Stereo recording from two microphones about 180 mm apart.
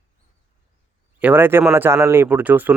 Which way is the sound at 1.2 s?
10° right (ahead or behind).